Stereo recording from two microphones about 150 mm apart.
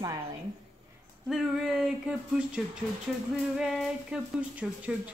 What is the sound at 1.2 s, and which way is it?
Speech, centre (ahead or behind).